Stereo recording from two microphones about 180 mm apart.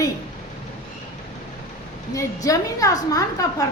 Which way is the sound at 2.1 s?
20° left (ahead or behind).